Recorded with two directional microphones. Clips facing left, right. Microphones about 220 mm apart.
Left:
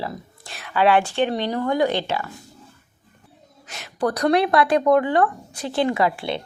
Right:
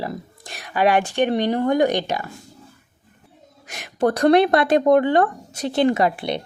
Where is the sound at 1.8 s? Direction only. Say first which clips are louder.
Right 2 dB; 15° right (ahead or behind).